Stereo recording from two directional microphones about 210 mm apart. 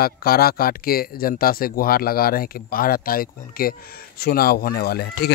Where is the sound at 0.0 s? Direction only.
45° left (ahead or behind).